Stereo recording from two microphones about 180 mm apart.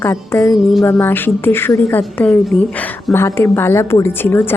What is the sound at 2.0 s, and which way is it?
A woman's voice, 5° left (ahead or behind).